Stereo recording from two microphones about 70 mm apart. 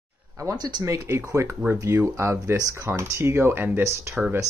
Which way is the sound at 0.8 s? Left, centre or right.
Right.